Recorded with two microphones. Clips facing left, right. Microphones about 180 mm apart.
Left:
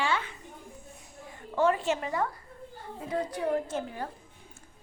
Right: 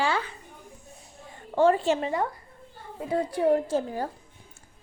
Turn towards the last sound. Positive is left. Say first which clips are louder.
# right 6 dB
turn(degrees=-35)  # may be behind; listen again after turning